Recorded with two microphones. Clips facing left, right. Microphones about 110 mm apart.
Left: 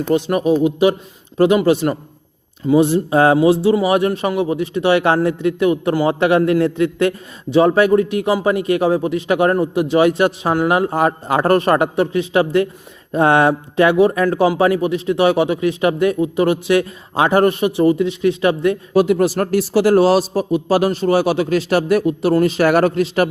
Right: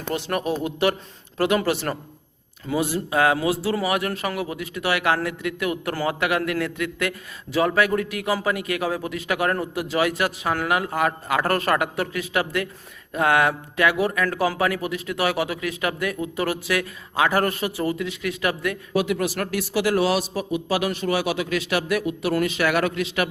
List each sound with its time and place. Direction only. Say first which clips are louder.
0.1 s a man's voice: left 9 dB; 20° left (ahead or behind); by 23.3 s 35° left (ahead or behind)